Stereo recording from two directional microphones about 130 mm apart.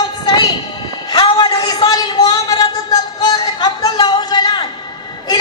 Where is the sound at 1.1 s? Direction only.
30° left (ahead or behind).